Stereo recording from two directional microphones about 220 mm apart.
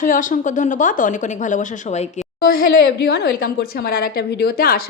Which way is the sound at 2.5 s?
45° left (ahead or behind).